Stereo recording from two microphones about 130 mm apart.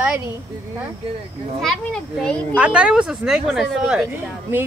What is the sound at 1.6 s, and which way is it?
Speech, centre (ahead or behind).